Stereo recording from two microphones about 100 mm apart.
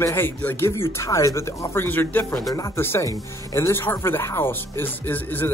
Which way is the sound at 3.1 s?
35° left (ahead or behind).